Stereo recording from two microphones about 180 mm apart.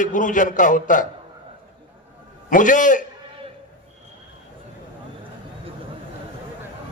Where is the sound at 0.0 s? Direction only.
45° left (ahead or behind).